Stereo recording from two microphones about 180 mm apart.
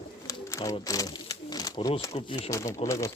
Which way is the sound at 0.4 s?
15° left (ahead or behind).